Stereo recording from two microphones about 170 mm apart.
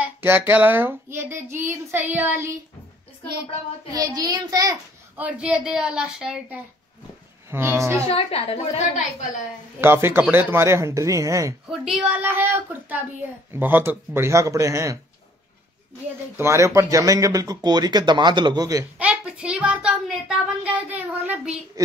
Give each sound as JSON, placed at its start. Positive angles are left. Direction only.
{"t": 0.0, "sound": "child singing", "side_deg": -10}
{"t": 3.9, "sound": "speech", "side_deg": -20}
{"t": 5.1, "sound": "a woman's voice", "side_deg": -5}
{"t": 7.5, "sound": "child singing", "side_deg": -15}
{"t": 8.1, "sound": "a woman's voice", "side_deg": 35}
{"t": 9.8, "sound": "child singing", "side_deg": -15}
{"t": 11.8, "sound": "child singing", "side_deg": -5}
{"t": 16.3, "sound": "speech", "side_deg": -15}
{"t": 18.9, "sound": "a sound", "side_deg": -5}